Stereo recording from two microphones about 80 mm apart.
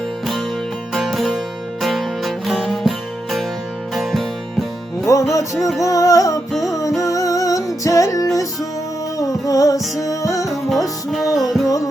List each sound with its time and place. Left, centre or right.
0.9 s music: centre
3.9 s music: centre
5.3 s music: left
9.5 s music: left
10.5 s music: centre